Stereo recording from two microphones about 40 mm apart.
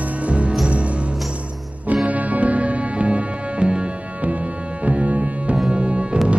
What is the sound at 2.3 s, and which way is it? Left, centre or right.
Music, right.